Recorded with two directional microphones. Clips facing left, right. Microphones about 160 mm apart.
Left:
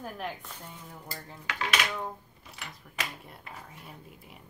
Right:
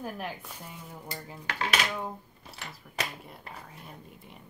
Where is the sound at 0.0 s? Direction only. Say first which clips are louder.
Right 1 dB; 10° right (ahead or behind).